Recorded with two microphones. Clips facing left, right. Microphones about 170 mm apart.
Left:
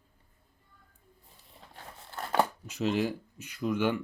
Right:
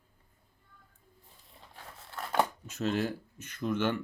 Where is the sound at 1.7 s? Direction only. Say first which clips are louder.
Left 2 dB; 30° left (ahead or behind).